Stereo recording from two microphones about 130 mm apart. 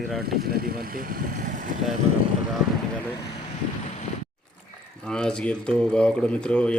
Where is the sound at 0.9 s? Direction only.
90° right.